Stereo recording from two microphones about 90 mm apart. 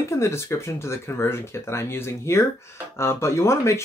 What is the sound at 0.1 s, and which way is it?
Speech, 30° left (ahead or behind).